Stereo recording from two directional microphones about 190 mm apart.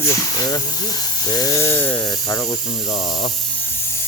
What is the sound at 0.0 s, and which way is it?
Speech, 15° left (ahead or behind).